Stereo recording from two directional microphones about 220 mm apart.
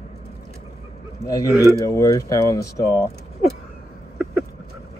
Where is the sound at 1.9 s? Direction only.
15° left (ahead or behind).